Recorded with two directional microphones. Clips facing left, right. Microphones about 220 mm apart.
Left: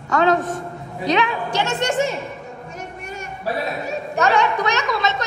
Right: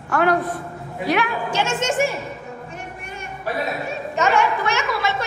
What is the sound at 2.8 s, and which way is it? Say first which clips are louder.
Music: left 2 dB; 40° left (ahead or behind).